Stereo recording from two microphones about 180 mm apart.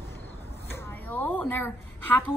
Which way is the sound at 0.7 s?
10° left (ahead or behind).